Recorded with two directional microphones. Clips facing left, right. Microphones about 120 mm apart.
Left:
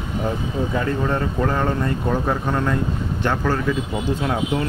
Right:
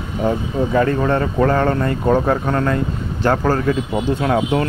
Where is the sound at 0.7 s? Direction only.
70° right (ahead or behind).